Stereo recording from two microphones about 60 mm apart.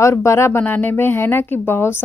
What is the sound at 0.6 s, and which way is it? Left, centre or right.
A woman's voice, left.